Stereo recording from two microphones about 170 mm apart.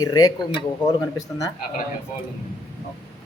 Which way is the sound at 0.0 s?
20° left (ahead or behind).